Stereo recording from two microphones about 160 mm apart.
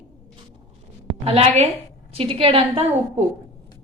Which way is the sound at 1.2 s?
40° right (ahead or behind).